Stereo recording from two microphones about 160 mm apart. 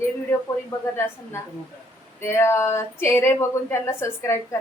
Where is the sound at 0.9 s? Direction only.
15° left (ahead or behind).